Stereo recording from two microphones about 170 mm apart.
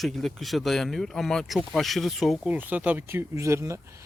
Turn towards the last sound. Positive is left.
turn(degrees=-15)  # may be behind; listen again after turning